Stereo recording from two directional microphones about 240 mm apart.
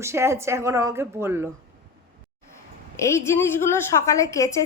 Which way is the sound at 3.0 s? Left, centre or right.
Centre.